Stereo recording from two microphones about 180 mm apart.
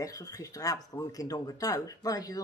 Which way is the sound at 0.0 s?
20° left (ahead or behind).